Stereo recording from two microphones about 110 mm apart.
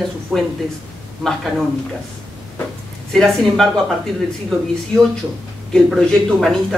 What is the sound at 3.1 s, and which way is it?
Speech, 5° left (ahead or behind).